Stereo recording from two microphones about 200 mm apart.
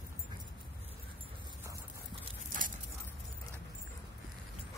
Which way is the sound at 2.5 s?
40° right (ahead or behind).